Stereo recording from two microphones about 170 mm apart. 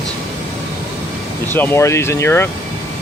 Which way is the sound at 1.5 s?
10° left (ahead or behind).